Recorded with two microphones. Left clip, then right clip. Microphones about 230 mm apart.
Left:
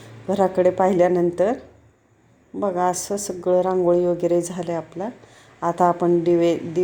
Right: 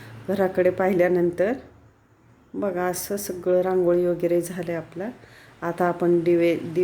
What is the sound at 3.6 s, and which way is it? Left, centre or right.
Speech, centre.